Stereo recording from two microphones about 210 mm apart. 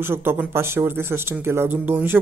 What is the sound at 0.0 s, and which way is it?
Speech, 10° right (ahead or behind).